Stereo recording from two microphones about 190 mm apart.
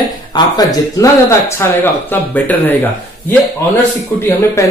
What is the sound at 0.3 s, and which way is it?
Speech, 20° left (ahead or behind).